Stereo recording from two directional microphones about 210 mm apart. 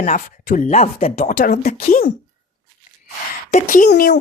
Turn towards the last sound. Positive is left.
turn(degrees=50)  # may be behind; listen again after turning